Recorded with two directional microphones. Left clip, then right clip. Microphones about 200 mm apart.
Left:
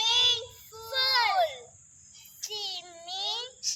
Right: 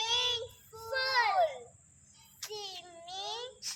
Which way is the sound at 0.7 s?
Centre (ahead or behind).